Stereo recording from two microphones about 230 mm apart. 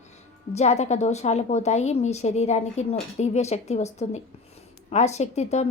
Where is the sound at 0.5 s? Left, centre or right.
Left.